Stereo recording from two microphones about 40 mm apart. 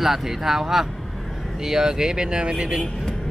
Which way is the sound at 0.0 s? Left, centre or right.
Centre.